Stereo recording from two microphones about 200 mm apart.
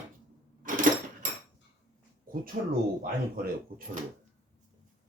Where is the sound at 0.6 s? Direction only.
45° right (ahead or behind).